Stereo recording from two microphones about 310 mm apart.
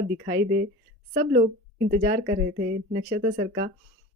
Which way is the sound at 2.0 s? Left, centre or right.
Right.